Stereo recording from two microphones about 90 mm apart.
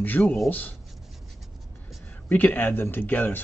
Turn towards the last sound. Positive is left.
turn(degrees=20)  # may be behind; listen again after turning